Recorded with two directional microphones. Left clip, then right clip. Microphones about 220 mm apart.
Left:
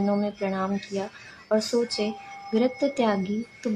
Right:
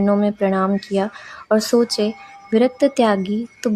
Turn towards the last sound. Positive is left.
turn(degrees=-40)  # may be behind; listen again after turning